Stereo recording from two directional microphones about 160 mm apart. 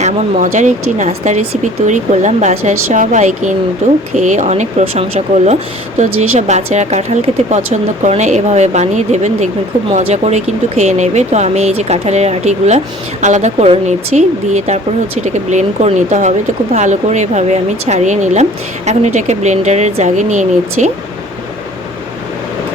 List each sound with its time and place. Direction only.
0.0 s speech: 50° right (ahead or behind)